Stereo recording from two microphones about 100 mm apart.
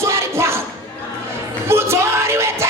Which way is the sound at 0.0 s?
25° right (ahead or behind).